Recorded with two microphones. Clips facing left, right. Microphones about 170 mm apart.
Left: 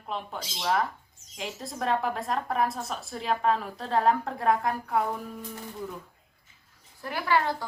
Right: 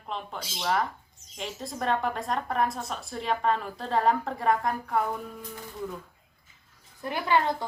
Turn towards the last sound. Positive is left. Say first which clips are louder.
# right 1 dB
turn(degrees=-20)  # may be behind; listen again after turning